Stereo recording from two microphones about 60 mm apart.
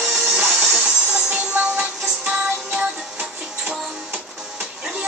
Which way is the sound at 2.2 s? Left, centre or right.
Right.